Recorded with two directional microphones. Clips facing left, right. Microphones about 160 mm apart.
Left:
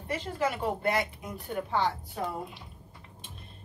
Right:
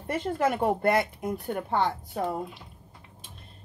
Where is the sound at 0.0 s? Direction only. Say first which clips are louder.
Right 4 dB; 55° right (ahead or behind).